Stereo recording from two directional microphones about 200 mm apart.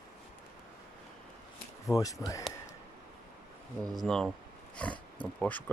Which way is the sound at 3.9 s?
Centre (ahead or behind).